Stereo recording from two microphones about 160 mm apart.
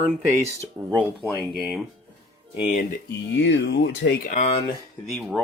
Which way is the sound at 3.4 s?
90° left.